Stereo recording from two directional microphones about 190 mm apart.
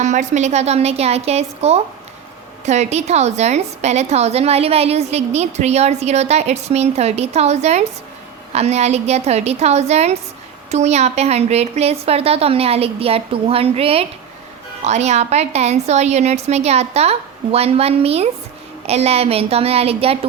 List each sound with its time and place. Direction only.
0.0 s a woman's voice: 40° right (ahead or behind)